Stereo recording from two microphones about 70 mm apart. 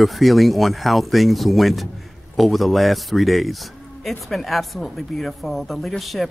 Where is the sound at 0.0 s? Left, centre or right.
Centre.